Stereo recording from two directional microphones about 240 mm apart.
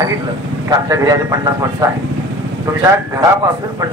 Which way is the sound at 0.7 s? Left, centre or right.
Centre.